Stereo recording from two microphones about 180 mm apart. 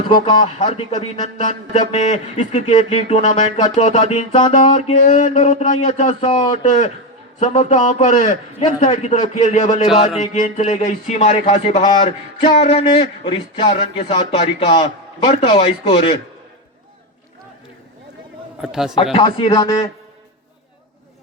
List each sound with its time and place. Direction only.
0.3 s a sound: 35° left (ahead or behind)
10.2 s speech: 40° left (ahead or behind)
18.6 s a man's voice: 5° right (ahead or behind)
19.1 s speech: 25° left (ahead or behind)